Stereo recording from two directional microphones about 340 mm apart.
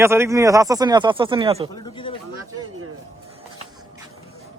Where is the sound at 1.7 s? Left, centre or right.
Centre.